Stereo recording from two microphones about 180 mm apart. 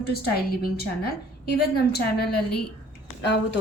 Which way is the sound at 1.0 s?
60° left (ahead or behind).